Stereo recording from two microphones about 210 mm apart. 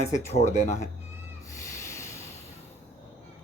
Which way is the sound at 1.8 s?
15° left (ahead or behind).